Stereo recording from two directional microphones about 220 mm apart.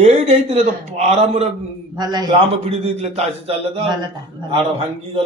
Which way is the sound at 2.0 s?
20° right (ahead or behind).